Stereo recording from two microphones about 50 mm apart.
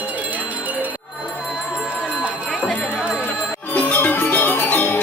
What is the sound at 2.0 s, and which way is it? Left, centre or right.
Run, right.